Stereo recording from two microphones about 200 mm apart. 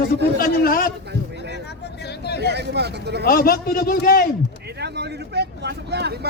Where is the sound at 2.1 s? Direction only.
55° left (ahead or behind).